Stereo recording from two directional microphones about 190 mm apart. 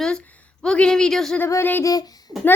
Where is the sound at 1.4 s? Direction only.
10° left (ahead or behind).